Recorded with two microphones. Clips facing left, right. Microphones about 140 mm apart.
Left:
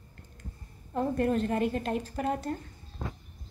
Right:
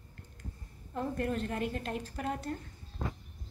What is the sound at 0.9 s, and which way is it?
A woman's voice, 35° left (ahead or behind).